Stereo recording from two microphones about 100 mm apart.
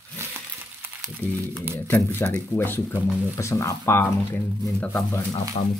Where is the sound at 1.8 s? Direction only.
20° left (ahead or behind).